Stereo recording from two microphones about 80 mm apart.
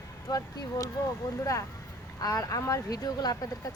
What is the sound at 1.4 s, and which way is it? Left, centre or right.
Speech, left.